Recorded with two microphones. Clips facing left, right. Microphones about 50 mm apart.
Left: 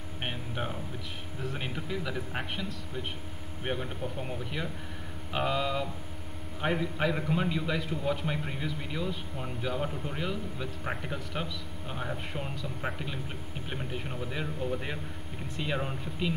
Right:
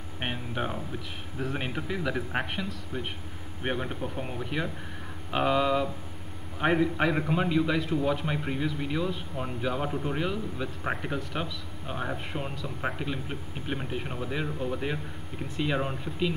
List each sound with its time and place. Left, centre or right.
0.2 s music: centre
1.4 s speech: right
4.2 s speech: centre